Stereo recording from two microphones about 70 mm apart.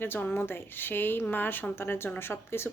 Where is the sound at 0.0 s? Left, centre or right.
Left.